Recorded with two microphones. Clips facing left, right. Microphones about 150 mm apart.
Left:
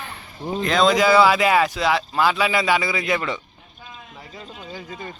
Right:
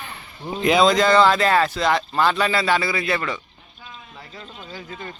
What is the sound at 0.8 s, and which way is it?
Speech, 5° left (ahead or behind).